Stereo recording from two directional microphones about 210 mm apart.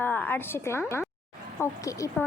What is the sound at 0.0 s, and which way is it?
A woman's voice, 10° left (ahead or behind).